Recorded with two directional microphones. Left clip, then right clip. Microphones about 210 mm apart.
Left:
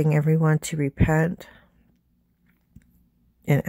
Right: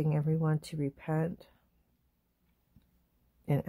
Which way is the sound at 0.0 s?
25° left (ahead or behind).